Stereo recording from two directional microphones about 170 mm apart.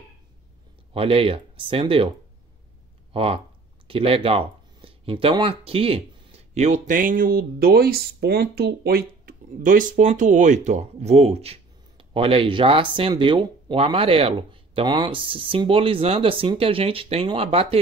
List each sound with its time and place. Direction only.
0.9 s speech: 35° right (ahead or behind)
3.1 s speech: 35° right (ahead or behind)